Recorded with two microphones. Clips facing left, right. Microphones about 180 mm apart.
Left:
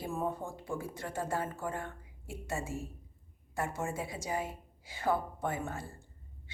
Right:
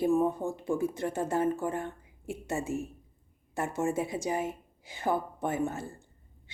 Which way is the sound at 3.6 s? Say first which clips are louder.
Right 6 dB; 20° right (ahead or behind).